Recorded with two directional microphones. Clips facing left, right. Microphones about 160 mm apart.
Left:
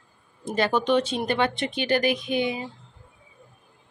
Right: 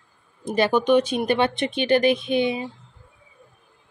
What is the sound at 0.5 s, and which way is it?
Speech, 15° right (ahead or behind).